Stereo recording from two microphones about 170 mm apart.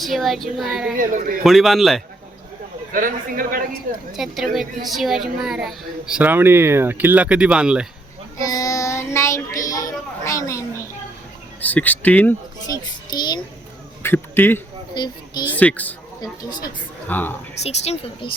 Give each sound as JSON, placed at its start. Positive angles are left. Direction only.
{"t": 0.0, "sound": "a woman's voice", "side_deg": 0}
{"t": 0.9, "sound": "a man's voice", "side_deg": -55}
{"t": 1.5, "sound": "a woman's voice", "side_deg": 0}
{"t": 2.9, "sound": "a man's voice", "side_deg": -55}
{"t": 4.2, "sound": "a woman's voice", "side_deg": 0}
{"t": 8.4, "sound": "child singing", "side_deg": 20}
{"t": 11.6, "sound": "speech", "side_deg": 10}
{"t": 13.1, "sound": "a child's voice", "side_deg": 25}
{"t": 14.0, "sound": "a sound", "side_deg": 15}
{"t": 14.9, "sound": "speech", "side_deg": 25}
{"t": 15.5, "sound": "speech", "side_deg": 10}
{"t": 16.2, "sound": "speech", "side_deg": 25}
{"t": 17.1, "sound": "speech", "side_deg": 10}
{"t": 17.6, "sound": "speech", "side_deg": 40}